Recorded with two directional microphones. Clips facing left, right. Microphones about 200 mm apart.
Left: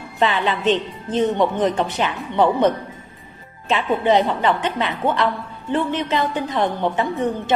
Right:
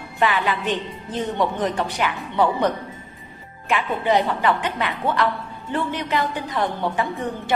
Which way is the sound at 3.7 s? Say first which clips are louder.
Left 3 dB; 25° left (ahead or behind).